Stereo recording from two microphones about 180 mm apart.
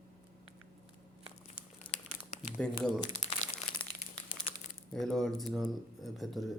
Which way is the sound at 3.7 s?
25° left (ahead or behind).